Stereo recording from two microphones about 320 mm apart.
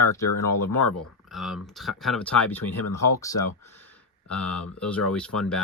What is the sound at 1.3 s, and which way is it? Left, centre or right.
Speech, centre.